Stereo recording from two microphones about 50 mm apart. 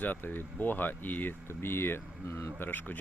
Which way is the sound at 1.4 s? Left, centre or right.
Left.